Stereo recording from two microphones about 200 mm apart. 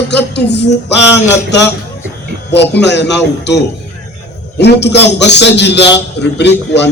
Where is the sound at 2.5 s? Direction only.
60° left (ahead or behind).